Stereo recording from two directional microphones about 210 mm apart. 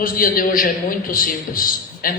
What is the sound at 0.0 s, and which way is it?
A man's voice, 40° left (ahead or behind).